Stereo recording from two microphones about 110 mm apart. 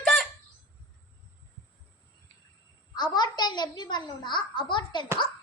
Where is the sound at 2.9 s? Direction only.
40° left (ahead or behind).